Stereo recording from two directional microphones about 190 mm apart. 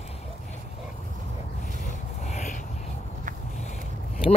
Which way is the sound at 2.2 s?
40° left (ahead or behind).